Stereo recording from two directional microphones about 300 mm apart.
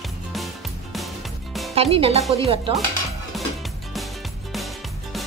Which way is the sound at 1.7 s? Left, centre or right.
Centre.